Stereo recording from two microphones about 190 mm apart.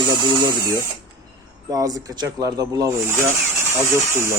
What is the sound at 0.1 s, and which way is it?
Speech, 25° right (ahead or behind).